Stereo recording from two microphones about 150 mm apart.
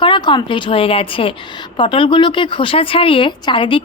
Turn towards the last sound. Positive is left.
turn(degrees=35)  # may be behind; listen again after turning